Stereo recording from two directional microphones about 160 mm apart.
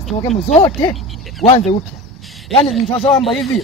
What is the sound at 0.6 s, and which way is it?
Speech, 25° left (ahead or behind).